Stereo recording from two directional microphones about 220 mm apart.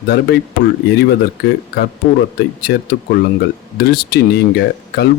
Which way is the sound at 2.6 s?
45° left (ahead or behind).